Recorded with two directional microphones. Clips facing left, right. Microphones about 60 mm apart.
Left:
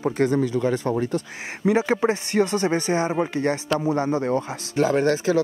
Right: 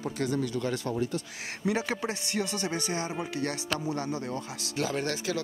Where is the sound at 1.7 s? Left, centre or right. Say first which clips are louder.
Left 11 dB; left.